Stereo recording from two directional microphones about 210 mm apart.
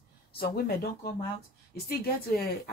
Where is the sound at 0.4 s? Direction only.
45° left (ahead or behind).